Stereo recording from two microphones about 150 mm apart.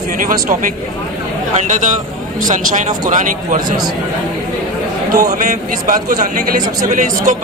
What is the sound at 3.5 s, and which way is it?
Speech, 25° right (ahead or behind).